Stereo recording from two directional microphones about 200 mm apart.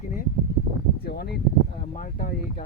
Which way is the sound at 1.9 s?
40° left (ahead or behind).